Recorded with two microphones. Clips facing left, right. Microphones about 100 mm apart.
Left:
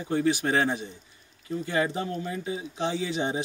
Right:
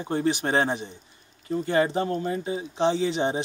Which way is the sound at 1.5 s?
40° right (ahead or behind).